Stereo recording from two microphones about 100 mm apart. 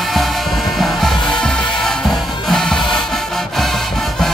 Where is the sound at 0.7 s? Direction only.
Centre (ahead or behind).